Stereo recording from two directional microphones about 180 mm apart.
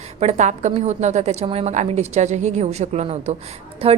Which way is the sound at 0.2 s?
40° right (ahead or behind).